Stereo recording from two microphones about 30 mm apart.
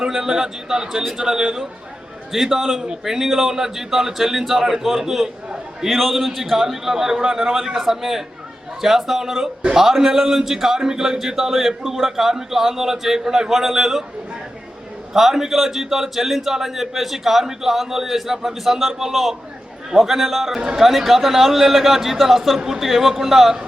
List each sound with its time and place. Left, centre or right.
0.1 s speech: centre
2.3 s a man's voice: centre
15.1 s a man's voice: centre